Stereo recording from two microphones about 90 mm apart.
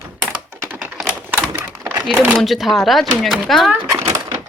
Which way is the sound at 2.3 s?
Centre (ahead or behind).